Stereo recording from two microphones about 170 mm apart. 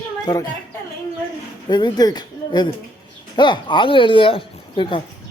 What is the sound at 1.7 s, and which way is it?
Speech, 25° left (ahead or behind).